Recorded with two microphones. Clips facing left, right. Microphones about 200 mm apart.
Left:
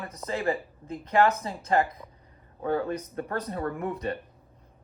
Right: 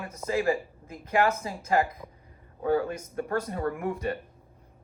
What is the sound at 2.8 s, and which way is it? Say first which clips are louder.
Speech: left 1 dB; 35° left (ahead or behind).